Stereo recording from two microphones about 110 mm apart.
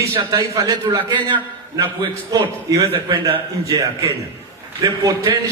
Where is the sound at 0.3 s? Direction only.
35° right (ahead or behind).